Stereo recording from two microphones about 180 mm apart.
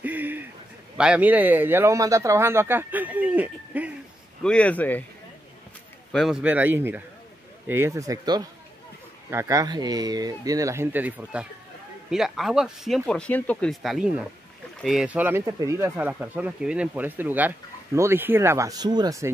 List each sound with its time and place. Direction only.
0.0 s a sound: 10° right (ahead or behind)
0.9 s speech: 5° right (ahead or behind)
4.4 s speech: 5° left (ahead or behind)
6.1 s speech: centre (ahead or behind); by 19.3 s 20° right (ahead or behind)